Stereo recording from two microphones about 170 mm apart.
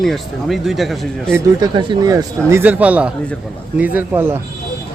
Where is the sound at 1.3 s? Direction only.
25° right (ahead or behind).